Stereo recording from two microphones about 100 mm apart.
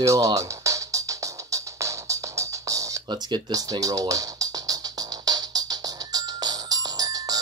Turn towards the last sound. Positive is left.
turn(degrees=-40)  # may be behind; listen again after turning